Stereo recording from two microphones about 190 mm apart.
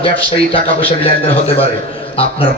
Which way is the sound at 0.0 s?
30° left (ahead or behind).